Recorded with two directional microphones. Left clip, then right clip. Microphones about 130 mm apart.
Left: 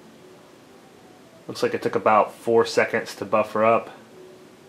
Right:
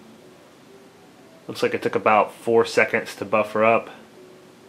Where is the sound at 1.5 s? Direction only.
5° right (ahead or behind).